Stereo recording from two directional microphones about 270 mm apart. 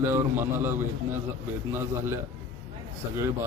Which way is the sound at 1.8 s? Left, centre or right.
Centre.